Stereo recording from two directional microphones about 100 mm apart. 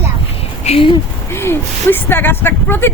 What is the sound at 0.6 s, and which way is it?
Speech, 70° left (ahead or behind).